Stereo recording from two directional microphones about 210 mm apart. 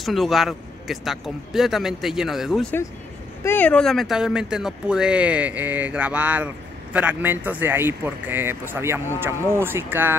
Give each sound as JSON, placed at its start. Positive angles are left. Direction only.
{"t": 0.0, "sound": "speech", "side_deg": 0}